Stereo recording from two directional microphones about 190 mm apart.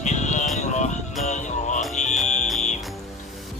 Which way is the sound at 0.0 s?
40° left (ahead or behind).